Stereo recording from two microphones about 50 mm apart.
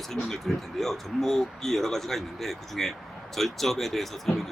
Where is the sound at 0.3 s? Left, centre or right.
Centre.